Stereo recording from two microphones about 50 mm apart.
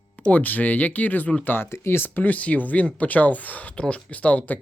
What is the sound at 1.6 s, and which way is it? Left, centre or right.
Speech, left.